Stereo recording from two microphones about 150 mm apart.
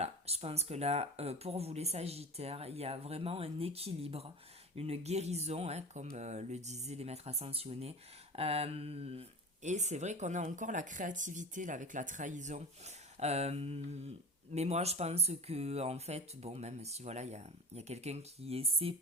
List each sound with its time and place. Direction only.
0.0 s speech: 45° right (ahead or behind)
8.4 s mantra: 40° right (ahead or behind)
9.6 s speech: 50° right (ahead or behind)